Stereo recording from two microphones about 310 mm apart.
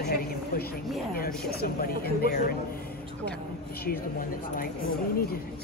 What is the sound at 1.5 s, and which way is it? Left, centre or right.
Speech, left.